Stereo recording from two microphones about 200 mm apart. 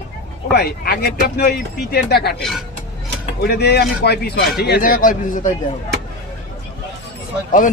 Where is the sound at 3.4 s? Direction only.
55° left (ahead or behind).